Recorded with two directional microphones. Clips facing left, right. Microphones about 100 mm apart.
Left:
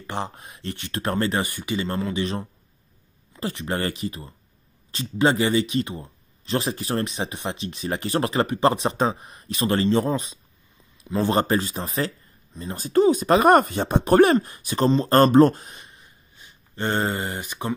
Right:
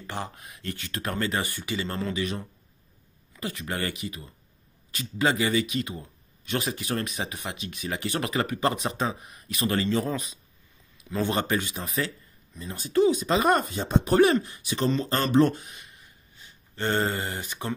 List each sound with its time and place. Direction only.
0.0 s speech: 25° left (ahead or behind)
1.4 s speech: 15° left (ahead or behind)
2.1 s speech: 30° left (ahead or behind)
15.0 s speech: 50° left (ahead or behind); by 16.1 s 30° left (ahead or behind)
16.3 s speech: 15° left (ahead or behind)